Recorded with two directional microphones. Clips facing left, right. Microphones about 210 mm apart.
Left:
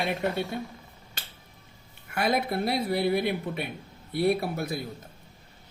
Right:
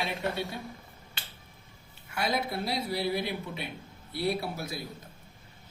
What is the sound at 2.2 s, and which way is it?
Speech, 55° left (ahead or behind).